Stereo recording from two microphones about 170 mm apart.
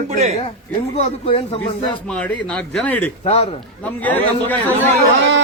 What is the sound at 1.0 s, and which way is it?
Speech, 35° left (ahead or behind).